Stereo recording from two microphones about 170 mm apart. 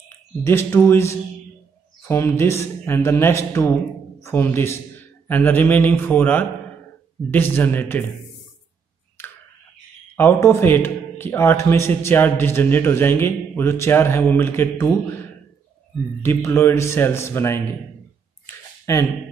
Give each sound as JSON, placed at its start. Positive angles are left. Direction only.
{"t": 0.4, "sound": "a man's voice", "side_deg": 15}
{"t": 10.1, "sound": "a man's voice", "side_deg": 15}
{"t": 16.2, "sound": "a man's voice", "side_deg": 15}
{"t": 18.9, "sound": "a man's voice", "side_deg": 20}